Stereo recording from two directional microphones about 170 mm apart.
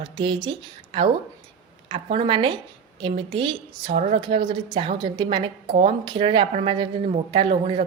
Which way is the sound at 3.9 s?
45° right (ahead or behind).